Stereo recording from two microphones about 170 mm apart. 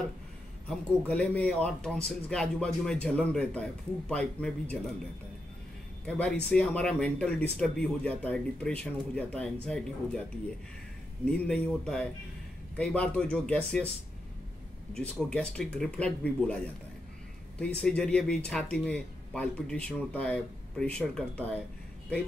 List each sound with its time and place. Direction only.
0.7 s speech: 5° left (ahead or behind)
6.0 s speech: 10° left (ahead or behind)
11.2 s speech: 5° left (ahead or behind)
15.0 s speech: 5° left (ahead or behind)
17.7 s speech: 5° left (ahead or behind)